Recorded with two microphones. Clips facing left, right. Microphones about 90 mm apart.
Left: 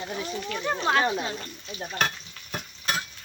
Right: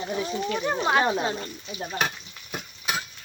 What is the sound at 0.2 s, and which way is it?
Speech, 20° right (ahead or behind).